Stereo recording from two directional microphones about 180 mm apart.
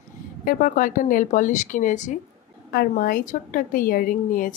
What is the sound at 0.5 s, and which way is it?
A woman's voice, 50° left (ahead or behind).